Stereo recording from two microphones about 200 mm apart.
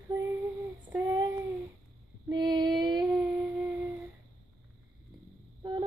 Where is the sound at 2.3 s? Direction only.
20° right (ahead or behind).